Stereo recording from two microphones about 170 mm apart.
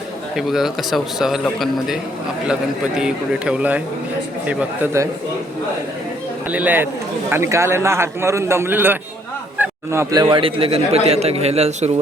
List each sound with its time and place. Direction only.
0.3 s a man's voice: centre (ahead or behind)
6.5 s a man's voice: 10° right (ahead or behind); by 11.9 s 40° right (ahead or behind)